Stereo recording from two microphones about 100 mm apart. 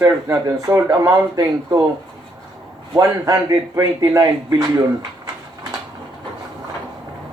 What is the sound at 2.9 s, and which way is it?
Speech, 40° right (ahead or behind).